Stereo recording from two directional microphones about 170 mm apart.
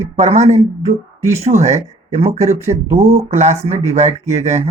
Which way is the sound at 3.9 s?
40° right (ahead or behind).